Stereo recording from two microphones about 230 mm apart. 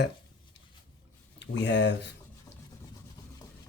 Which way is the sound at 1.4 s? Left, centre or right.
Left.